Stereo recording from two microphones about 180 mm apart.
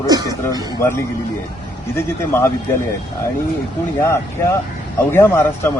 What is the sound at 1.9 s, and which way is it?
Speech, 15° left (ahead or behind).